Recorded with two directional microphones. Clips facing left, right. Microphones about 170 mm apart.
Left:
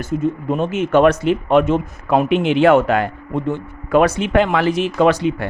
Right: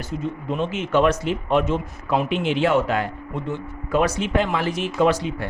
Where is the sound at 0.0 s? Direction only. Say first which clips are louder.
Left 8 dB; 50° left (ahead or behind).